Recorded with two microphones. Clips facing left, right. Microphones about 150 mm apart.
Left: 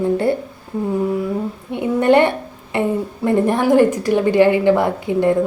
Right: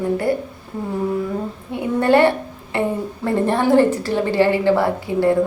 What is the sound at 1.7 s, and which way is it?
A woman's voice, 20° left (ahead or behind).